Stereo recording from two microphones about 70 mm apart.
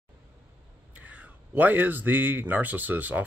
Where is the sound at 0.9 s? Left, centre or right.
Right.